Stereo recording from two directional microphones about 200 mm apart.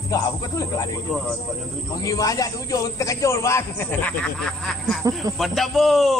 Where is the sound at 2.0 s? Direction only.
15° left (ahead or behind).